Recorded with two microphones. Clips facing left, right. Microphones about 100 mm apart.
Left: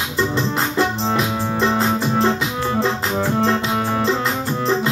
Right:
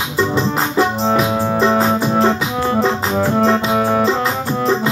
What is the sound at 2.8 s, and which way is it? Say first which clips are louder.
Organ: right 4 dB; 10° right (ahead or behind).